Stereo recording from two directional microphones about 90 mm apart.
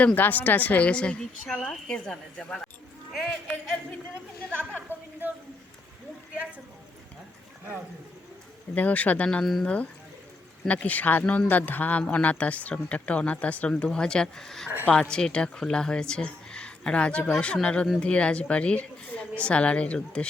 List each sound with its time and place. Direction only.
0.0 s a man's voice: 15° left (ahead or behind); by 3.8 s centre (ahead or behind)
4.9 s a sound: 25° right (ahead or behind)
8.7 s speech: 15° left (ahead or behind)
9.4 s a man's voice: centre (ahead or behind)
10.7 s speech: 15° left (ahead or behind)